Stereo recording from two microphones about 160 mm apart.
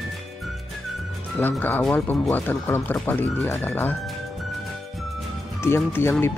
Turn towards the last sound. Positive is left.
turn(degrees=15)  # may be behind; listen again after turning